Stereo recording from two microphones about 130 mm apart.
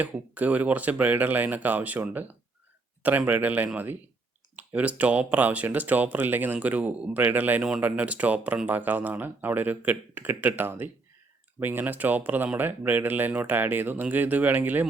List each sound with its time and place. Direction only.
0.0 s speech: 10° right (ahead or behind)